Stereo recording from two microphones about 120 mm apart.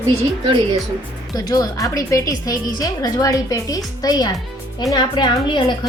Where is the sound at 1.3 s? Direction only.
30° left (ahead or behind).